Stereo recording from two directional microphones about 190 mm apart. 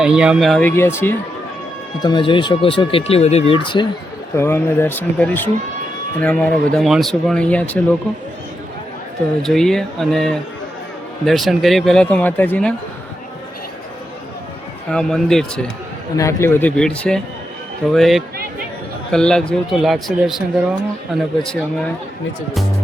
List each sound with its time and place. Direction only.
0.0 s speech: 5° right (ahead or behind); by 1.1 s 10° left (ahead or behind)
2.0 s speech: 25° left (ahead or behind)
4.4 s speech: 10° left (ahead or behind)
9.4 s speech: centre (ahead or behind)
14.8 s speech: 5° left (ahead or behind)
16.1 s speech: 15° left (ahead or behind)